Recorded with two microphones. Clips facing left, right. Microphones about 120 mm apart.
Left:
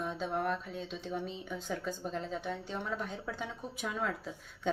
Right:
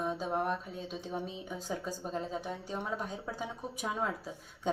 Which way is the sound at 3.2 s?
25° right (ahead or behind).